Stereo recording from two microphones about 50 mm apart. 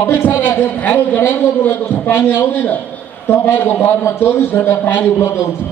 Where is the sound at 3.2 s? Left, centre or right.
Left.